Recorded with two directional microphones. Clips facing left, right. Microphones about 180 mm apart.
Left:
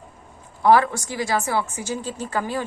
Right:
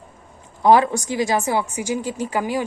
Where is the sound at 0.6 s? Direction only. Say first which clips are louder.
Right 2 dB; 20° right (ahead or behind).